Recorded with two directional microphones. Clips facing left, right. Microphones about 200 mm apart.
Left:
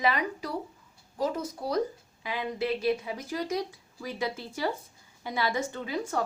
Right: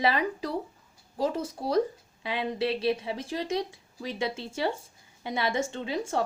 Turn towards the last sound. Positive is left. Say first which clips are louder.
# right 2 dB
turn(degrees=-25)  # may be behind; listen again after turning